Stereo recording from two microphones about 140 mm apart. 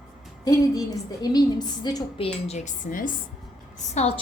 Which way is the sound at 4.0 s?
55° left (ahead or behind).